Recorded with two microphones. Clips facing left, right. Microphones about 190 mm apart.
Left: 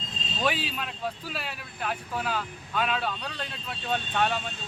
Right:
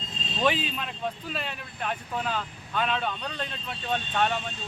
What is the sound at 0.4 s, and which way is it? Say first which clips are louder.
Speech: right 3 dB; 5° left (ahead or behind).